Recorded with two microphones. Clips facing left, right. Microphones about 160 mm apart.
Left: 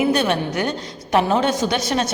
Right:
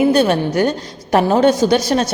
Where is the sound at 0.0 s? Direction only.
35° right (ahead or behind).